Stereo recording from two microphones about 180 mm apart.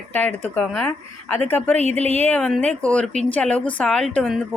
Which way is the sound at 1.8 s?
35° right (ahead or behind).